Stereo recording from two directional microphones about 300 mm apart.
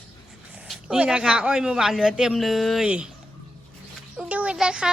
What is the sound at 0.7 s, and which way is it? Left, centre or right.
A woman's voice, centre.